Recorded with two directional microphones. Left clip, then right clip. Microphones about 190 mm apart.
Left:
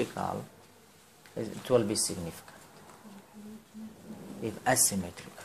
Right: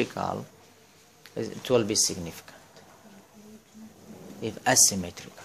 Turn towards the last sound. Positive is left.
turn(degrees=-40)  # may be behind; listen again after turning